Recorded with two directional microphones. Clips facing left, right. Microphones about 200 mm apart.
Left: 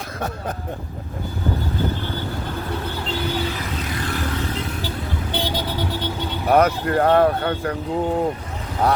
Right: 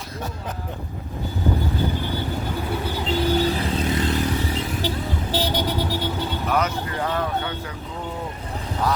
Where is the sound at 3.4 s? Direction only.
30° right (ahead or behind).